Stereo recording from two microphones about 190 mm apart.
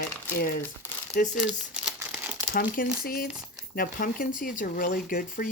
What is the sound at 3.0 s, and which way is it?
Speech, 50° left (ahead or behind).